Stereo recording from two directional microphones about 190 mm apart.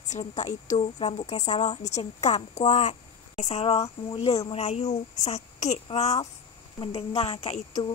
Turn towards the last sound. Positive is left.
turn(degrees=35)  # may be behind; listen again after turning